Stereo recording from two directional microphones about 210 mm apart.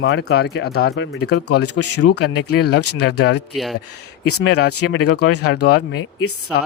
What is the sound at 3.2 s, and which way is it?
Speech, 55° left (ahead or behind).